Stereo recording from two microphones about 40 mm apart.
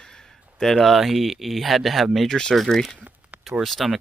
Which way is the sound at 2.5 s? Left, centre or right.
Centre.